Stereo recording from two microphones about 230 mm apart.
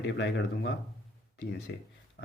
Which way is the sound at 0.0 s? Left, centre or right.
Left.